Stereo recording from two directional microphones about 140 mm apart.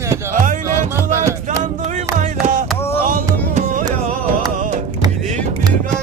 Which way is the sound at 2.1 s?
60° right (ahead or behind).